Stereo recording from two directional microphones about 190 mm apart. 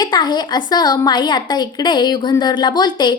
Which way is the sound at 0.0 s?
25° left (ahead or behind).